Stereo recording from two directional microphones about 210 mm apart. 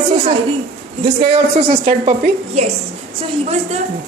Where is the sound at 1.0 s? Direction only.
25° right (ahead or behind).